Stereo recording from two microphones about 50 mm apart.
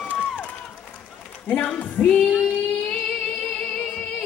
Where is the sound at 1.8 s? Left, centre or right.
Left.